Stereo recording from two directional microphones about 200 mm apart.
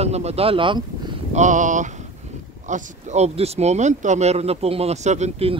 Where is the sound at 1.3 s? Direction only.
40° right (ahead or behind).